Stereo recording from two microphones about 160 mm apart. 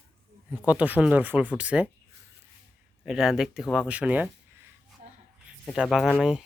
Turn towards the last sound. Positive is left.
turn(degrees=-5)  # may be behind; listen again after turning